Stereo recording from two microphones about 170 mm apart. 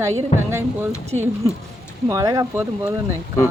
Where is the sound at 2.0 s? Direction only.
20° right (ahead or behind).